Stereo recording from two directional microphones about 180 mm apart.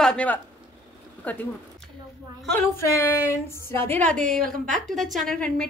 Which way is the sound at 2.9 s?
15° left (ahead or behind).